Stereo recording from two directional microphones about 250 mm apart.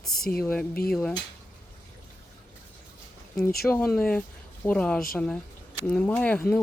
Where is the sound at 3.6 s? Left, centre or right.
Centre.